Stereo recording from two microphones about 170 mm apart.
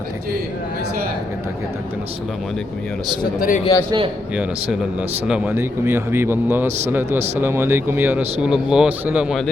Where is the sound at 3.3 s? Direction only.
50° left (ahead or behind).